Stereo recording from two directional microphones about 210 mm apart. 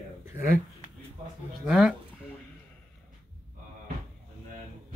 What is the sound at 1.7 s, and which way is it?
Speech, 5° right (ahead or behind).